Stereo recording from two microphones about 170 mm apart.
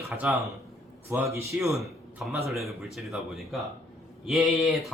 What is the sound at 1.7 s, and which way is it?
A man's voice, centre (ahead or behind).